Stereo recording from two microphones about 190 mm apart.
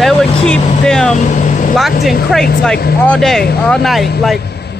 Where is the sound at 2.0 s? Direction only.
55° left (ahead or behind).